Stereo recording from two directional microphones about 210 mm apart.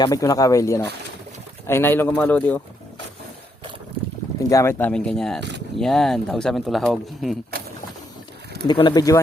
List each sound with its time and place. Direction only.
0.0 s speech: 15° left (ahead or behind)
4.4 s speech: 15° left (ahead or behind)
5.4 s a sound: 55° right (ahead or behind)
5.7 s speech: centre (ahead or behind)
8.6 s speech: 20° left (ahead or behind)